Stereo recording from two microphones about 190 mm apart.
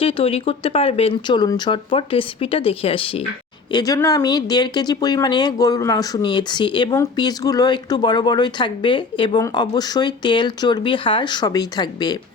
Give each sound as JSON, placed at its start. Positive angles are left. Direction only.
{"t": 0.0, "sound": "speech", "side_deg": 30}